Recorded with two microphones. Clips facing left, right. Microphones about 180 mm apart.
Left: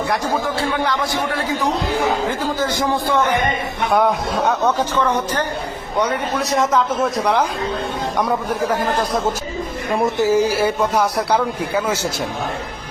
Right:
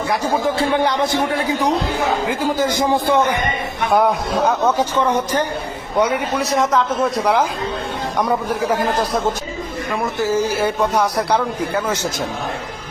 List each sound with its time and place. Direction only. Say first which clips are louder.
0.6 s speech: right 3 dB; 20° right (ahead or behind)
2.4 s a man's voice: right 2 dB; 15° right (ahead or behind)
3.9 s a man's voice: right 1 dB; centre (ahead or behind)
4.8 s a man's voice: right 1 dB; 15° right (ahead or behind)
9.9 s speech: left 3 dB; 20° left (ahead or behind); by 11.9 s 5° left (ahead or behind)